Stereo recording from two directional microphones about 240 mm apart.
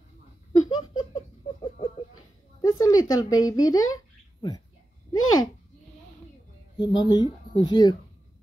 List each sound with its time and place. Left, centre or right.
0.5 s laughter: centre
2.6 s a sound: centre
3.3 s speech: centre
5.1 s speech: left
6.8 s speech: centre